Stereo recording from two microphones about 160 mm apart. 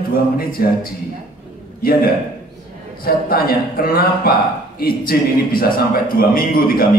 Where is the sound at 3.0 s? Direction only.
70° left (ahead or behind).